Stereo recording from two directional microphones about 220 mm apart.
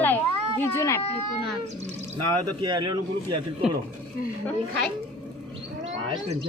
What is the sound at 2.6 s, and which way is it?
Speech, 20° right (ahead or behind).